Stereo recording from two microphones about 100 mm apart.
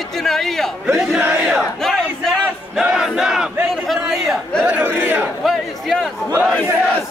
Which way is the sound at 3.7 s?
Centre (ahead or behind).